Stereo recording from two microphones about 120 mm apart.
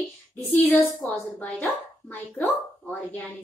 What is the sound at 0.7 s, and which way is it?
Speech, 15° left (ahead or behind).